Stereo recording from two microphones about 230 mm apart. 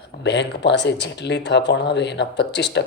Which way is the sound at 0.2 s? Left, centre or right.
Left.